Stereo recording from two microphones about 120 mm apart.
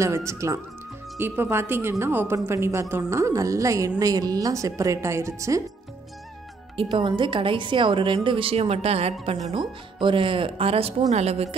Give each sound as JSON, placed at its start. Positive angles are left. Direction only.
{"t": 0.0, "sound": "a woman's voice", "side_deg": -25}
{"t": 6.8, "sound": "a woman's voice", "side_deg": -45}
{"t": 9.6, "sound": "a woman's voice", "side_deg": -40}